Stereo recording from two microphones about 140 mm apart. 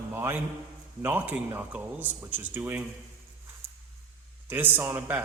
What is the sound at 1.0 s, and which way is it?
A man's voice, 10° right (ahead or behind).